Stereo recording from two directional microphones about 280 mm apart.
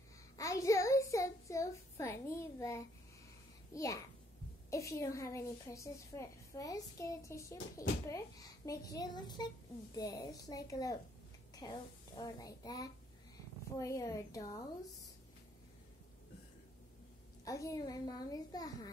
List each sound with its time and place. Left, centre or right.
0.4 s a sound: centre
3.7 s a woman's voice: centre
17.5 s a woman's voice: centre